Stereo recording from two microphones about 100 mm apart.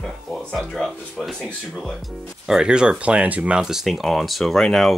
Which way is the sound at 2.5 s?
5° right (ahead or behind).